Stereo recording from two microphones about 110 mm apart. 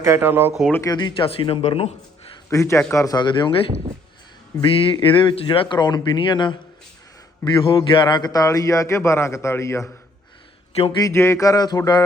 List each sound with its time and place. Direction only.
0.0 s speech: 20° right (ahead or behind)
0.9 s speech: 45° left (ahead or behind)
2.5 s a man's voice: 25° left (ahead or behind)
3.2 s speech: 45° left (ahead or behind)
4.6 s a man's voice: 55° left (ahead or behind); by 9.8 s 25° left (ahead or behind)
10.7 s speech: 70° left (ahead or behind)
11.1 s a sound: 25° left (ahead or behind)